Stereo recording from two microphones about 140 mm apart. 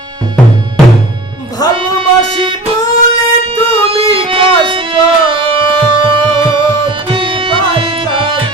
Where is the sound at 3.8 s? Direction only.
40° right (ahead or behind).